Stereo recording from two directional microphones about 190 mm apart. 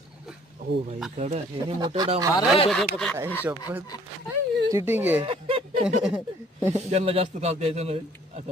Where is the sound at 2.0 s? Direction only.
20° right (ahead or behind).